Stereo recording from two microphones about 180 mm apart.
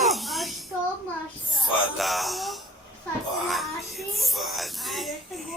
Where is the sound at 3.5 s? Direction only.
Centre (ahead or behind).